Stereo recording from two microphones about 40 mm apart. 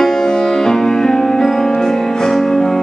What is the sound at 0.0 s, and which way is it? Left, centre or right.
Music, centre.